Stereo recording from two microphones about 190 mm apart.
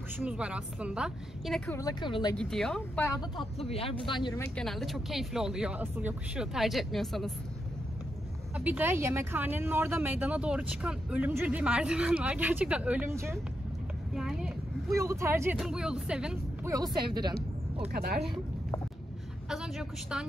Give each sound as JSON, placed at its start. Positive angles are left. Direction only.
{"t": 0.2, "sound": "speech", "side_deg": -5}
{"t": 1.8, "sound": "speech", "side_deg": 20}
{"t": 2.3, "sound": "speech", "side_deg": 5}
{"t": 3.0, "sound": "speech", "side_deg": 20}
{"t": 3.5, "sound": "speech", "side_deg": 30}
{"t": 4.4, "sound": "speech", "side_deg": 5}
{"t": 8.5, "sound": "speech", "side_deg": -10}
{"t": 14.1, "sound": "a sound", "side_deg": 0}
{"t": 14.9, "sound": "speech", "side_deg": -15}
{"t": 15.5, "sound": "speech", "side_deg": -5}
{"t": 16.7, "sound": "speech", "side_deg": -20}
{"t": 17.9, "sound": "speech", "side_deg": -55}
{"t": 19.5, "sound": "a woman's voice", "side_deg": -5}